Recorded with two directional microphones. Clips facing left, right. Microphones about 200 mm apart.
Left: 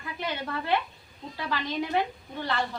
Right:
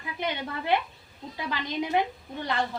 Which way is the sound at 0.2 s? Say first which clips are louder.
Right 1 dB; 20° right (ahead or behind).